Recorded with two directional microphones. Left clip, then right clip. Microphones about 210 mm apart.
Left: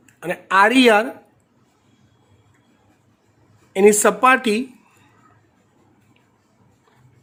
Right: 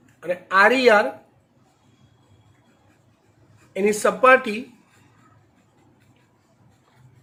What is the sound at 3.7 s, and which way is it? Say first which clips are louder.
Speech: left 6 dB; 55° left (ahead or behind).